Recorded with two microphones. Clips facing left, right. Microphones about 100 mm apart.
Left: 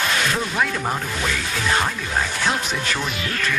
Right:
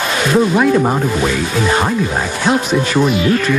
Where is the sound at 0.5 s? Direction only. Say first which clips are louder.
Right 11 dB; 20° right (ahead or behind).